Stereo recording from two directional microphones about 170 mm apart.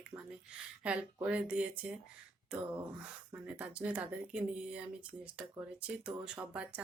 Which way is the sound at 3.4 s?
5° right (ahead or behind).